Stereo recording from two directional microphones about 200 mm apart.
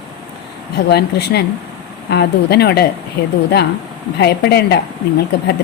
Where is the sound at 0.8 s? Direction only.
55° left (ahead or behind).